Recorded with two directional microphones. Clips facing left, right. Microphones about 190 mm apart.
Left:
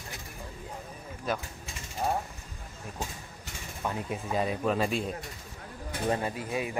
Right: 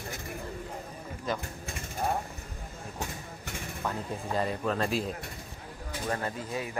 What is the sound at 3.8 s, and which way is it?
Speech, 10° left (ahead or behind).